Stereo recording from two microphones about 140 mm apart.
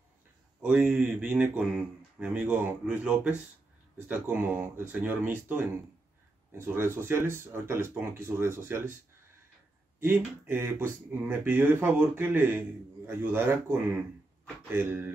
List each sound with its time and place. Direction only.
0.6 s speech: 10° right (ahead or behind)
9.9 s speech: 15° right (ahead or behind)